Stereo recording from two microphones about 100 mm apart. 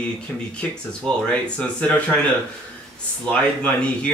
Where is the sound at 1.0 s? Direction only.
5° left (ahead or behind).